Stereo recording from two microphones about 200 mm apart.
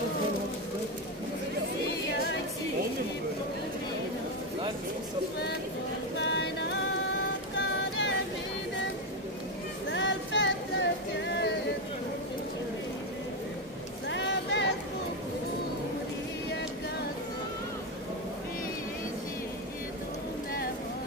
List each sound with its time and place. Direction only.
6.1 s music: 60° left (ahead or behind)
9.8 s music: 65° left (ahead or behind)
14.0 s vehicle: 60° left (ahead or behind)